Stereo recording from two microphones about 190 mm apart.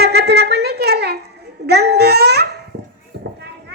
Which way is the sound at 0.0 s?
60° right (ahead or behind).